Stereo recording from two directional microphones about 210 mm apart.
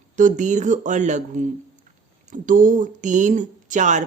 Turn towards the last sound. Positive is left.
turn(degrees=-35)  # may be behind; listen again after turning